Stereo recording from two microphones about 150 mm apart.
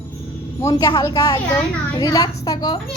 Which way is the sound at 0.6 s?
20° left (ahead or behind).